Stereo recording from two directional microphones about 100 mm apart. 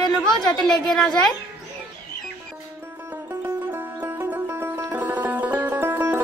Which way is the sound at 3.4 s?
20° right (ahead or behind).